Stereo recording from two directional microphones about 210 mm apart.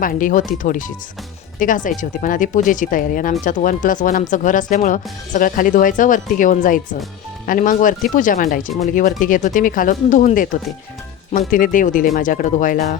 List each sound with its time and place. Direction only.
0.0 s speech: 40° left (ahead or behind)